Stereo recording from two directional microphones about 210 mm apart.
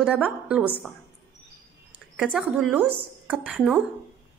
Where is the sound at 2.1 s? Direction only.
Centre (ahead or behind).